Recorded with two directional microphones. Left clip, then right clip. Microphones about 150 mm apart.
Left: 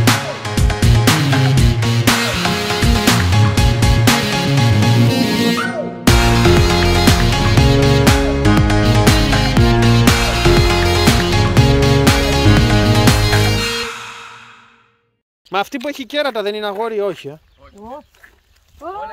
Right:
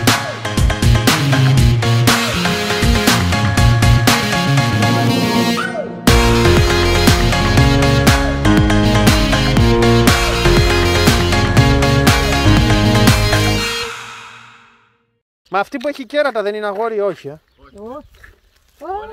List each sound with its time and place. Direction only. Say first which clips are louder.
0.0 s music: right 1 dB; centre (ahead or behind)
15.5 s speech: right 1 dB; 15° left (ahead or behind)